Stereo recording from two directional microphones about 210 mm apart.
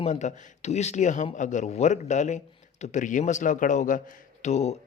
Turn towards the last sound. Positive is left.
turn(degrees=30)  # may be behind; listen again after turning